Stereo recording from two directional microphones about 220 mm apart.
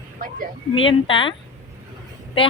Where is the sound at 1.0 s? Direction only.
25° left (ahead or behind).